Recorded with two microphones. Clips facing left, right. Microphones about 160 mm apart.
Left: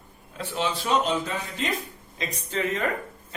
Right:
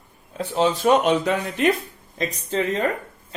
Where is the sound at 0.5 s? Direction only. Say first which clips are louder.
Right 8 dB; 40° right (ahead or behind).